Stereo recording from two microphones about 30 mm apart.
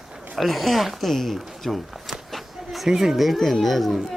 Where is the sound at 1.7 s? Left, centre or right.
Centre.